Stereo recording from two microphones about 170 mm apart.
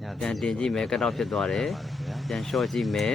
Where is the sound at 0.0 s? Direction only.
Centre (ahead or behind).